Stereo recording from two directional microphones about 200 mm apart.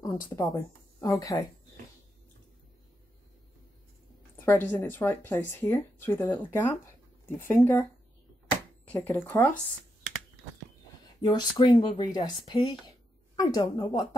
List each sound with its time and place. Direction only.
0.0 s speech: 15° left (ahead or behind)
4.5 s speech: 10° left (ahead or behind)
8.8 s a sound: 5° left (ahead or behind)
9.2 s speech: 10° left (ahead or behind)
11.2 s speech: 20° left (ahead or behind)